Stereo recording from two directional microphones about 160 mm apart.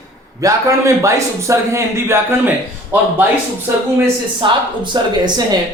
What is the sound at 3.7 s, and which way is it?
Speech, 15° right (ahead or behind).